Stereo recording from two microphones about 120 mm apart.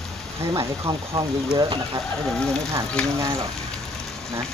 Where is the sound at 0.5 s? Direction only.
30° right (ahead or behind).